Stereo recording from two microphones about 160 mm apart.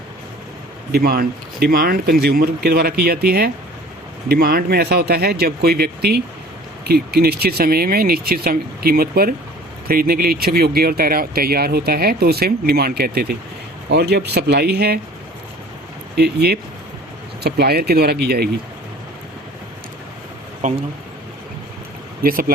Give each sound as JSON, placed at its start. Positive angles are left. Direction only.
{"t": 0.9, "sound": "speech", "side_deg": -75}
{"t": 13.9, "sound": "speech", "side_deg": -90}
{"t": 16.1, "sound": "speech", "side_deg": -90}
{"t": 20.6, "sound": "speech", "side_deg": -50}
{"t": 22.2, "sound": "speech", "side_deg": -65}